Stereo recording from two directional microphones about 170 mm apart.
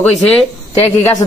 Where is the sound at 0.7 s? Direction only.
20° left (ahead or behind).